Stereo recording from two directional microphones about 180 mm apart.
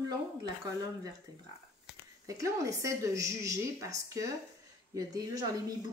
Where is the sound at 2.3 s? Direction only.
20° right (ahead or behind).